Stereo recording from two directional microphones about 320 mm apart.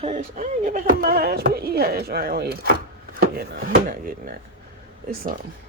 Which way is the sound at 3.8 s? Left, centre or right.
Right.